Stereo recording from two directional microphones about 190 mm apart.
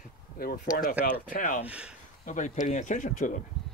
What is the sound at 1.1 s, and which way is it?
Speech, 45° left (ahead or behind).